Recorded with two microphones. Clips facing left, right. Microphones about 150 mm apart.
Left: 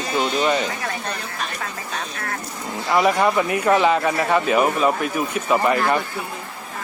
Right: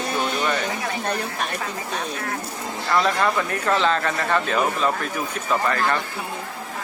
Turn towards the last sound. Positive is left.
turn(degrees=15)  # may be behind; listen again after turning